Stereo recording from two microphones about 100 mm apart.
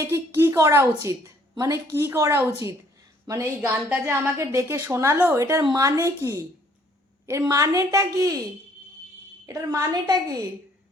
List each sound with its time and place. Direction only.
0.0 s a woman's voice: 25° right (ahead or behind)
7.3 s a woman's voice: 35° right (ahead or behind)
9.5 s a woman's voice: 35° right (ahead or behind)